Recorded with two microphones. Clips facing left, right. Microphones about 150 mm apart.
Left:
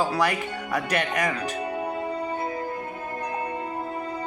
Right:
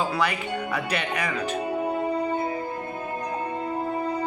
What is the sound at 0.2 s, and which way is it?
Speech, 45° left (ahead or behind).